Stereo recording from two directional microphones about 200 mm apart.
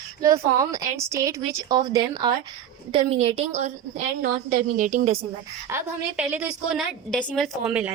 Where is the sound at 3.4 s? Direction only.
35° right (ahead or behind).